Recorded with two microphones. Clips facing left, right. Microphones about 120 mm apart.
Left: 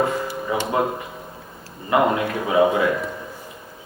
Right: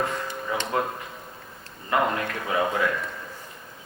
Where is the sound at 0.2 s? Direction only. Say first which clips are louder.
Left 5 dB; 10° left (ahead or behind).